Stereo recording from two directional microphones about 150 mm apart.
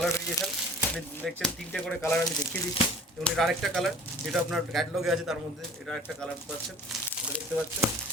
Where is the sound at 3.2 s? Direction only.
Centre (ahead or behind).